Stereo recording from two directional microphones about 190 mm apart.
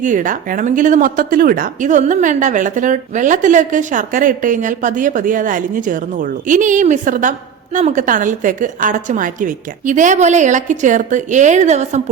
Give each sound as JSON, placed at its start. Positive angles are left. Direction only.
{"t": 0.0, "sound": "a woman's voice", "side_deg": -45}